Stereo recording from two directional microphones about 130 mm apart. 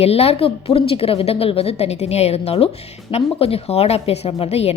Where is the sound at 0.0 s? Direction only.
50° left (ahead or behind).